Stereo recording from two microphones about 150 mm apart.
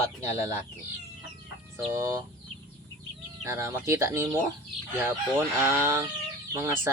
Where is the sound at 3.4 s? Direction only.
20° right (ahead or behind).